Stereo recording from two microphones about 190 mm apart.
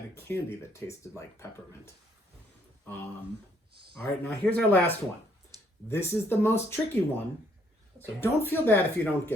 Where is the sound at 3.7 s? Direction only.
55° right (ahead or behind).